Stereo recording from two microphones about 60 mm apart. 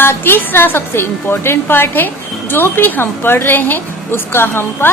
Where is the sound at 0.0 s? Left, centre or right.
Left.